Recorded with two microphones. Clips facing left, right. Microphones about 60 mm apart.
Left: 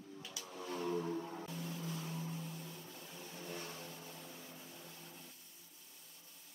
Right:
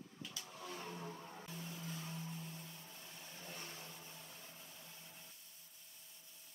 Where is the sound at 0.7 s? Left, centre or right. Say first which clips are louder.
Left 11 dB; left.